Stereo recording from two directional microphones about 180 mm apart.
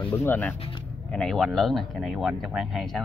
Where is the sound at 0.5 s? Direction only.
30° left (ahead or behind).